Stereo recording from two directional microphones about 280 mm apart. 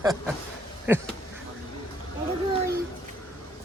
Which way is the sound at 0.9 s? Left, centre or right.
Centre.